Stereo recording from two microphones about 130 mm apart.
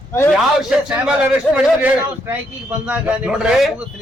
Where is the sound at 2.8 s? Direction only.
10° right (ahead or behind).